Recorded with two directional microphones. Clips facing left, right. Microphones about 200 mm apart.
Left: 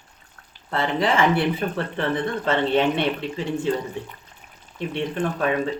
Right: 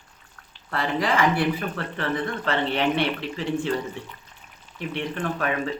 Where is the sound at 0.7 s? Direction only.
25° left (ahead or behind).